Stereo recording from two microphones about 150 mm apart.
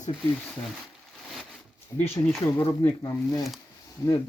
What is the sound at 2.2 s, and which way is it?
Speech, 25° left (ahead or behind).